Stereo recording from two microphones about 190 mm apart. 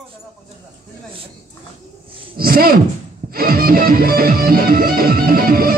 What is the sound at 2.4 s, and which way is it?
Speech, 50° right (ahead or behind).